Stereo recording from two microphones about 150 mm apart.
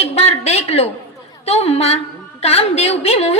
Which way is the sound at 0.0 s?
45° left (ahead or behind).